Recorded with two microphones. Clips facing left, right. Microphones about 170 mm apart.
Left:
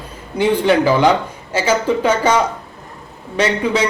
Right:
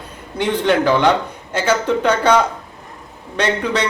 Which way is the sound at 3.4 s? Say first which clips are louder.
Left 2 dB; 5° left (ahead or behind).